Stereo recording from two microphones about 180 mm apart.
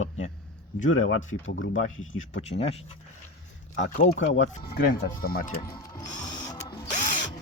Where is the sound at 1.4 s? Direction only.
90° left.